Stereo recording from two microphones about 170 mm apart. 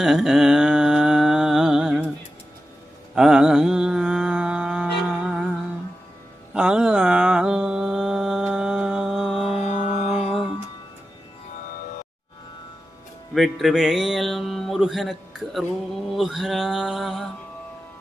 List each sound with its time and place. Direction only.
0.0 s mantra: 5° right (ahead or behind)
3.2 s music: 5° right (ahead or behind)
6.5 s mantra: 5° right (ahead or behind)
9.6 s music: 40° left (ahead or behind)
13.3 s mantra: centre (ahead or behind)